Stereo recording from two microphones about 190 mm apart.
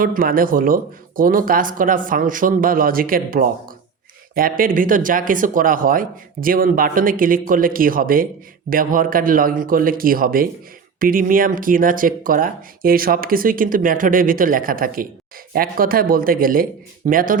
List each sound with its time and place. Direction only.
0.0 s speech: 50° right (ahead or behind)